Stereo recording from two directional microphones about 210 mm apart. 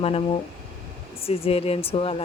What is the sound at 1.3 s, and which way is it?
Speech, 30° left (ahead or behind).